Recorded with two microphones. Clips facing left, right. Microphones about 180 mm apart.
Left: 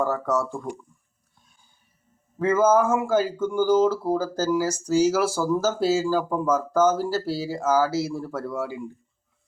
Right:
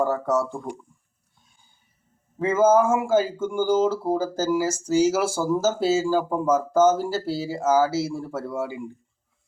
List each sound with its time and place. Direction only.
0.0 s speech: 25° right (ahead or behind)
2.4 s speech: 25° right (ahead or behind)